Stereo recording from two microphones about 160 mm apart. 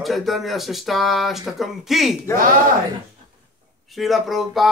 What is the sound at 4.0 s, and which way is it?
Speech, centre (ahead or behind).